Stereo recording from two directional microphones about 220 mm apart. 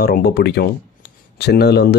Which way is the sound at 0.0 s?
45° left (ahead or behind).